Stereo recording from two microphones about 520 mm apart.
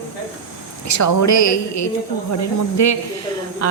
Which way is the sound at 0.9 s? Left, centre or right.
Left.